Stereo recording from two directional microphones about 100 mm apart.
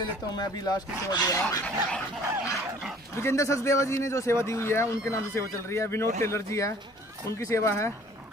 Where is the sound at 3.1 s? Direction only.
30° left (ahead or behind).